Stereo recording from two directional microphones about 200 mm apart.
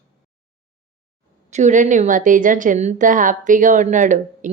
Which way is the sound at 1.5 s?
35° right (ahead or behind).